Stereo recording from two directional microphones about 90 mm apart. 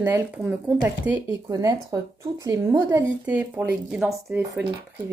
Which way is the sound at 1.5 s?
40° right (ahead or behind).